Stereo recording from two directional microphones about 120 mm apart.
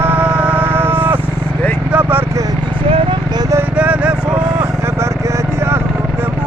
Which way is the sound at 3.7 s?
10° right (ahead or behind).